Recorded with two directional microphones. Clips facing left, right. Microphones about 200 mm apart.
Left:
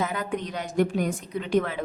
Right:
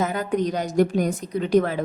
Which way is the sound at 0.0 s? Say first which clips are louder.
Right 6 dB; 40° right (ahead or behind).